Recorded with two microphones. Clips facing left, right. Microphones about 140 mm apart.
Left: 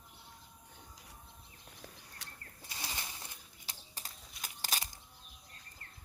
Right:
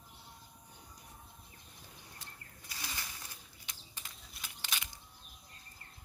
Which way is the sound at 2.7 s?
25° left (ahead or behind).